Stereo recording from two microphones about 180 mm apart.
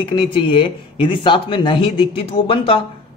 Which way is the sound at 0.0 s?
30° left (ahead or behind).